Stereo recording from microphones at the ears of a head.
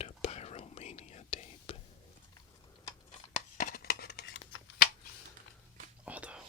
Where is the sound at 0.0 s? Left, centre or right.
Left.